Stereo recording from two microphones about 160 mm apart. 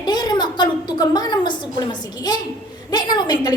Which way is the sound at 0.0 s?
25° left (ahead or behind).